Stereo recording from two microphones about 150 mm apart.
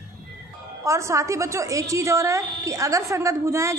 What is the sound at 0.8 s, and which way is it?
A woman's voice, 20° right (ahead or behind).